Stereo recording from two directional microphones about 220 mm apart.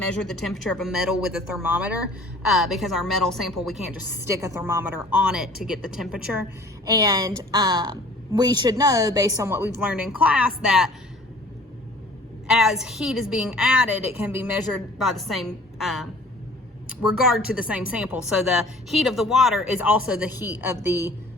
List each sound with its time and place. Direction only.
0.2 s a woman's voice: centre (ahead or behind)
6.8 s a woman's voice: 15° right (ahead or behind)
12.5 s a woman's voice: centre (ahead or behind)
17.2 s a woman's voice: 5° right (ahead or behind)